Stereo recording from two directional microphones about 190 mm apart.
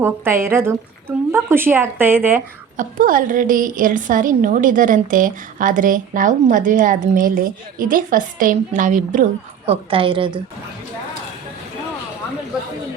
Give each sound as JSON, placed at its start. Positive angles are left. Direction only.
{"t": 0.0, "sound": "speech", "side_deg": -10}
{"t": 2.7, "sound": "a woman's voice", "side_deg": -45}
{"t": 9.6, "sound": "a woman's voice", "side_deg": -30}